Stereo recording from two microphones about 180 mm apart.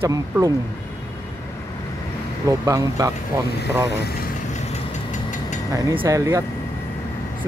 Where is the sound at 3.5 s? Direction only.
65° left (ahead or behind).